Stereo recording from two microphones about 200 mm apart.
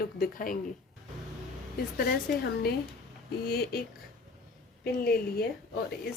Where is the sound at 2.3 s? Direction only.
50° left (ahead or behind).